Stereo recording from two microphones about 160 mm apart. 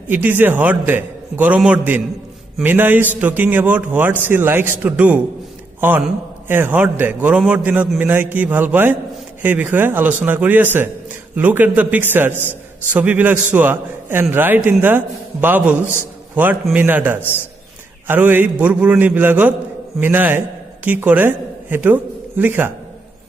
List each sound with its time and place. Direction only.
0.1 s a man's voice: 10° right (ahead or behind)